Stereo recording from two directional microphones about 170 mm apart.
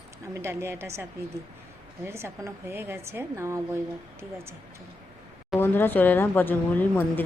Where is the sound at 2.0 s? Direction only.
15° right (ahead or behind).